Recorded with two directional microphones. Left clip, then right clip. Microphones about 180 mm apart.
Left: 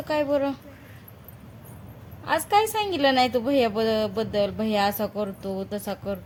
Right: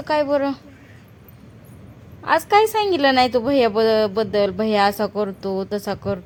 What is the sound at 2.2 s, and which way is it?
A woman's voice, 35° right (ahead or behind).